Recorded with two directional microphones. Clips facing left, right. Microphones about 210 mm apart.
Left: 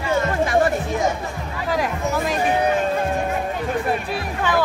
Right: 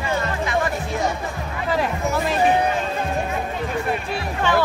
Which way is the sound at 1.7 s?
10° left (ahead or behind).